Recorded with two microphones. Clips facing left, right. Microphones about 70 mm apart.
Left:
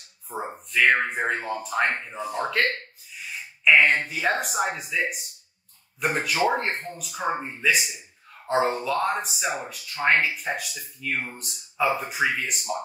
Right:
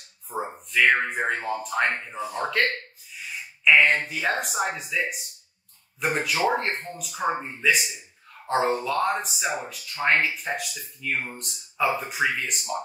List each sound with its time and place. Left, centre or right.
0.3 s speech: centre
3.6 s speech: centre